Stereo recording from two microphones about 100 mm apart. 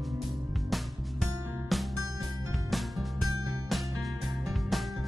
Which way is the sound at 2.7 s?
Centre (ahead or behind).